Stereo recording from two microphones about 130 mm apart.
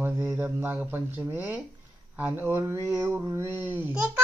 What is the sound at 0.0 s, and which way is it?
Speech, 15° right (ahead or behind).